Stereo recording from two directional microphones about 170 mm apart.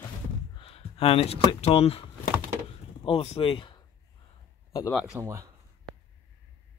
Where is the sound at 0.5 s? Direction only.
35° left (ahead or behind).